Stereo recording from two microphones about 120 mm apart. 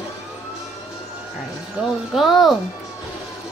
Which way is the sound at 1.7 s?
Centre (ahead or behind).